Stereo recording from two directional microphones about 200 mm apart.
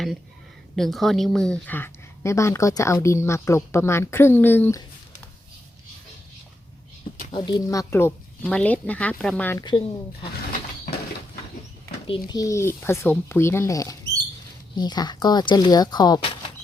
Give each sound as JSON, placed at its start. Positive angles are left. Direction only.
{"t": 0.8, "sound": "speech", "side_deg": 0}
{"t": 7.3, "sound": "speech", "side_deg": 25}
{"t": 9.6, "sound": "speech", "side_deg": 25}
{"t": 12.0, "sound": "speech", "side_deg": 25}